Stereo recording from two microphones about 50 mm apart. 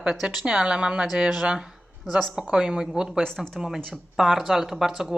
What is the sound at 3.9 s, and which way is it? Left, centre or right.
Speech, centre.